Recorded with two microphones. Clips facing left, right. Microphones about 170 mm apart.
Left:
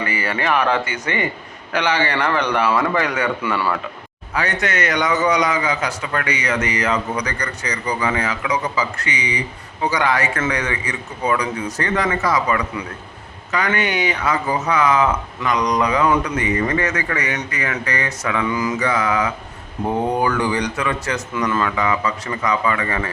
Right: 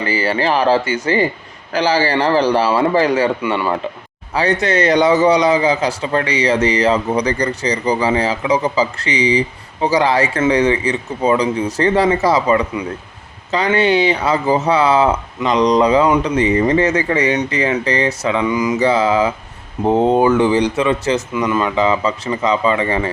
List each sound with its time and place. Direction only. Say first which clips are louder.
0.0 s a man's voice: right 5 dB; 30° right (ahead or behind)